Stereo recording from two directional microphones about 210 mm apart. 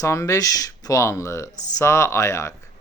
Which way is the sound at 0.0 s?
15° left (ahead or behind).